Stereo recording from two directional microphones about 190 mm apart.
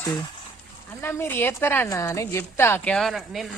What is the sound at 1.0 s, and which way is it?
A woman's voice, 10° left (ahead or behind).